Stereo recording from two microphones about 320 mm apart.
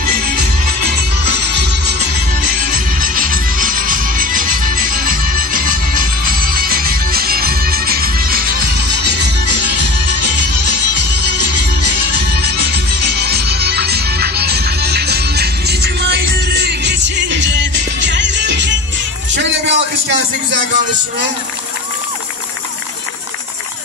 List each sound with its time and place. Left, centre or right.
0.0 s music: right
1.5 s music: right
12.3 s music: right